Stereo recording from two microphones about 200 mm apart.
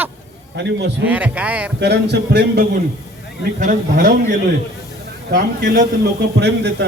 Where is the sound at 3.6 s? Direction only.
40° right (ahead or behind).